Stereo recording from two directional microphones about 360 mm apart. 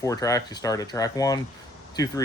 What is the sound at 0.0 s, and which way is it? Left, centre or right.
Speech, centre.